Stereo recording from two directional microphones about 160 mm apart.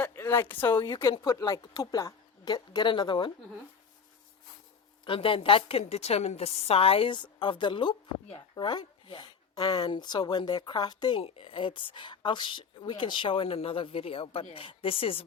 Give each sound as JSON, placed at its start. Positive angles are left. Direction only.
{"t": 0.0, "sound": "speech", "side_deg": 15}
{"t": 1.0, "sound": "a woman's voice", "side_deg": 25}
{"t": 5.0, "sound": "a woman's voice", "side_deg": 35}